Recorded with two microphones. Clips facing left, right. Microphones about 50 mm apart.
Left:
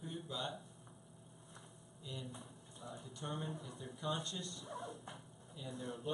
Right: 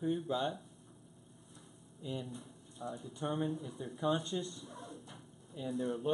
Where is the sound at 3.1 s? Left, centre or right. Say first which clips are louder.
Right 8 dB; centre.